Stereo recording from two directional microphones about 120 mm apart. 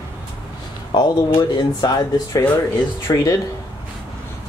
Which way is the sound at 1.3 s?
30° left (ahead or behind).